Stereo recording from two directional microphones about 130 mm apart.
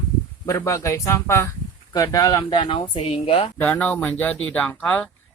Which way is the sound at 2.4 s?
40° left (ahead or behind).